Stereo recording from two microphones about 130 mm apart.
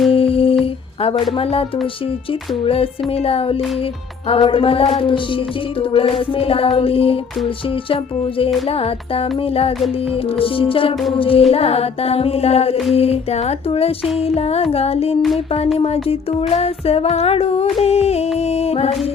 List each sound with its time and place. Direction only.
0.1 s music: 45° left (ahead or behind)
2.6 s music: 45° left (ahead or behind)